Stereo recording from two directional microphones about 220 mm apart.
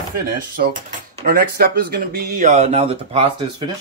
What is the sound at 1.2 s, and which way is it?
Speech, 40° right (ahead or behind).